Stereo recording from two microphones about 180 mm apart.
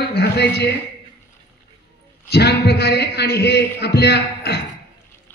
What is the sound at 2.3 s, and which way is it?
A man's voice, 65° left (ahead or behind).